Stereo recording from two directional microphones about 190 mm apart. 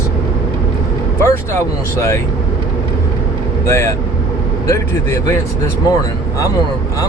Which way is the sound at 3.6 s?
15° left (ahead or behind).